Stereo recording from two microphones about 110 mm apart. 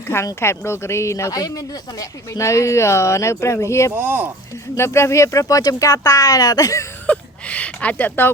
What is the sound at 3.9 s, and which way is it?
Speech, 15° right (ahead or behind).